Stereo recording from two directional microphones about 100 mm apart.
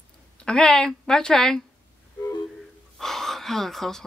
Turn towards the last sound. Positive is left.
turn(degrees=5)  # may be behind; listen again after turning